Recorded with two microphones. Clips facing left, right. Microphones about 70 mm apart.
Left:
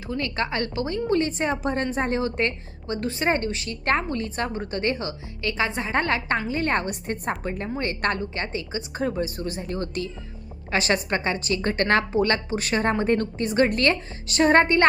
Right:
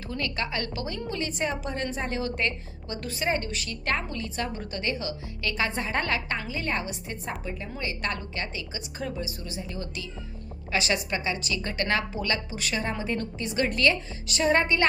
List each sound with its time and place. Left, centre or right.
0.1 s a woman's voice: left
6.5 s a woman's voice: left